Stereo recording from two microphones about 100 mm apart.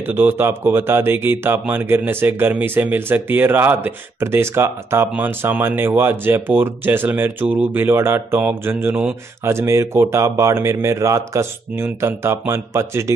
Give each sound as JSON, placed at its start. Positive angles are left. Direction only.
{"t": 0.0, "sound": "speech", "side_deg": -20}